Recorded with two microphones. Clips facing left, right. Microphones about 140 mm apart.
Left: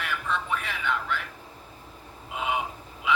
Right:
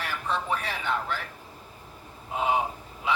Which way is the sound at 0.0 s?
35° right (ahead or behind).